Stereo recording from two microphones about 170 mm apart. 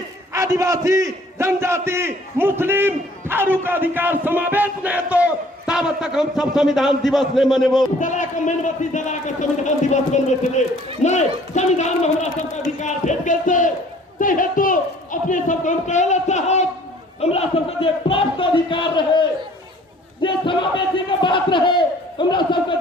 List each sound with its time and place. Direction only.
0.3 s a man's voice: 20° right (ahead or behind); by 7.9 s centre (ahead or behind)
8.0 s speech: 50° left (ahead or behind); by 19.2 s 30° left (ahead or behind)
20.2 s speech: 30° left (ahead or behind)